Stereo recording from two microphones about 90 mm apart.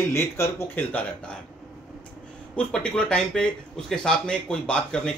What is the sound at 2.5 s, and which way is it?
Speech, 10° left (ahead or behind).